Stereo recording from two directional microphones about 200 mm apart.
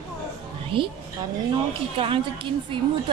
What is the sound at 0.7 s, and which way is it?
Speech, 25° right (ahead or behind).